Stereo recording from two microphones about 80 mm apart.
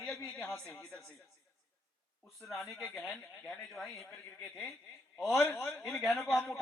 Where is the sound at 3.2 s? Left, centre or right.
Centre.